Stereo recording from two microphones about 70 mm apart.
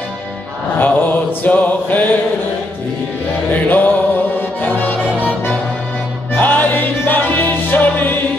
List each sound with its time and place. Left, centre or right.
0.7 s mantra: left
3.6 s music: left